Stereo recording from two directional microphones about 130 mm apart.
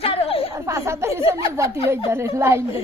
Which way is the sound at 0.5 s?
20° right (ahead or behind).